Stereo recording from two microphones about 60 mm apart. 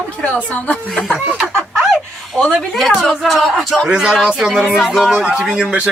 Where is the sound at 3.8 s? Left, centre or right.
Centre.